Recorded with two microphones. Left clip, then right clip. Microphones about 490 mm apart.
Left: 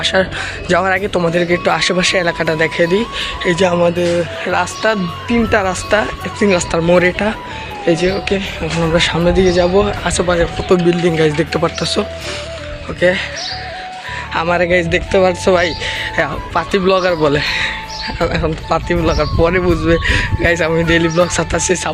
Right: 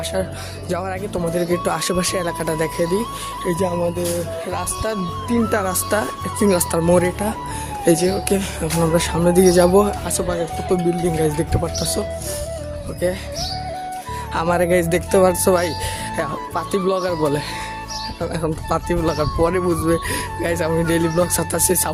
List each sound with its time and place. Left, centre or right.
0.0 s speech: right
10.1 s speech: right
14.3 s speech: right